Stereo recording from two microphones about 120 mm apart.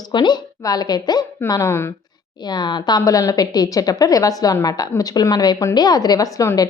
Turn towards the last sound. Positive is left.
turn(degrees=30)  # may be behind; listen again after turning